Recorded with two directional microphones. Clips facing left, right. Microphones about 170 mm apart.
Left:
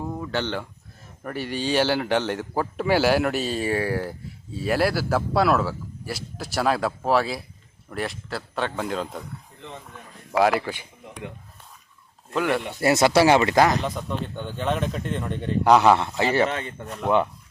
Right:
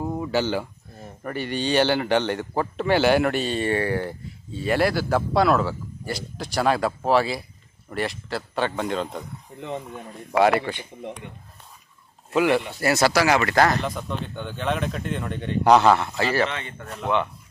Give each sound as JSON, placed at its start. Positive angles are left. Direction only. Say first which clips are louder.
{"t": 0.0, "sound": "a sound", "louder": "right 4 dB", "side_deg": -15}
{"t": 1.2, "sound": "a man's voice", "louder": "right 1 dB", "side_deg": 0}
{"t": 10.3, "sound": "a man's voice", "louder": "right 1 dB", "side_deg": 0}
{"t": 12.3, "sound": "a man's voice", "louder": "right 4 dB", "side_deg": -5}
{"t": 12.8, "sound": "speech", "louder": "left 5 dB", "side_deg": 20}
{"t": 13.8, "sound": "a man's voice", "louder": "left 1 dB", "side_deg": 0}
{"t": 16.0, "sound": "speech", "louder": "left 1 dB", "side_deg": 20}
{"t": 16.5, "sound": "speech", "louder": "left 4 dB", "side_deg": 40}
{"t": 16.9, "sound": "a man's voice", "louder": "left 3 dB", "side_deg": 5}